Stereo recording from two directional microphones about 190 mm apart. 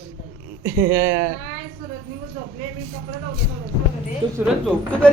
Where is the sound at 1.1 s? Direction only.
50° right (ahead or behind).